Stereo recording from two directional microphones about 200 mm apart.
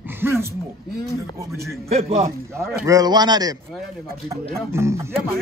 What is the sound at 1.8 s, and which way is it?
Speech, 30° right (ahead or behind).